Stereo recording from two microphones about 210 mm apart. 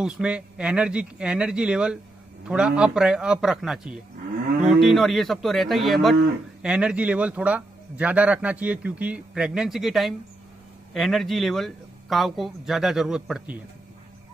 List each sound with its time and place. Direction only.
0.0 s a man's voice: 5° right (ahead or behind)